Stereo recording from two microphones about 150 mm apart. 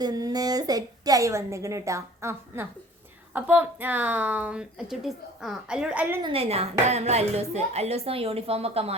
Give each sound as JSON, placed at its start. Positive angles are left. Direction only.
{"t": 0.0, "sound": "a woman's voice", "side_deg": -25}
{"t": 6.2, "sound": "speech", "side_deg": -40}